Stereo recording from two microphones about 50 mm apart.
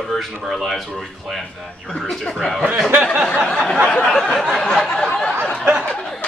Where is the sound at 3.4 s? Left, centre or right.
Left.